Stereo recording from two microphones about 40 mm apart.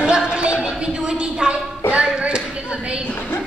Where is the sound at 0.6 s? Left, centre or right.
Right.